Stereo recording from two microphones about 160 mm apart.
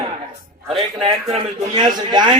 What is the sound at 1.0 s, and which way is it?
Speech, 40° right (ahead or behind).